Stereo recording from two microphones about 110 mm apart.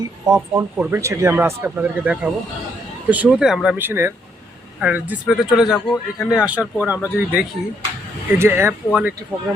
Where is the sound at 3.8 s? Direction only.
20° right (ahead or behind).